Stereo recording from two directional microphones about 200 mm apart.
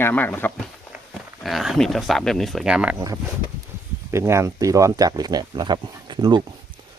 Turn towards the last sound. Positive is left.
turn(degrees=-20)  # may be behind; listen again after turning